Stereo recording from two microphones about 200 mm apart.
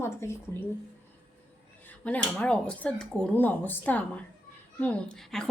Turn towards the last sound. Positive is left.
turn(degrees=5)  # may be behind; listen again after turning